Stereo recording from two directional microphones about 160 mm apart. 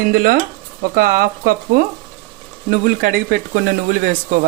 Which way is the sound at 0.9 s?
70° right (ahead or behind).